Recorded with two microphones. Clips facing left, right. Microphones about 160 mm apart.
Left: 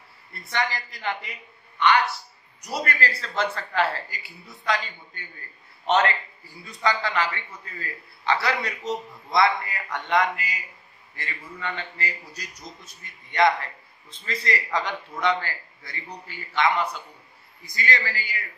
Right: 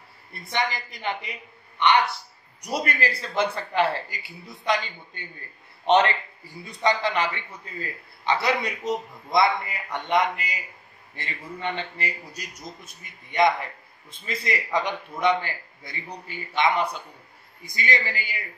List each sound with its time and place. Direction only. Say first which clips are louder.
0.3 s a man's voice: right 1 dB; 20° right (ahead or behind)
2.6 s a man's voice: right 1 dB; 15° right (ahead or behind)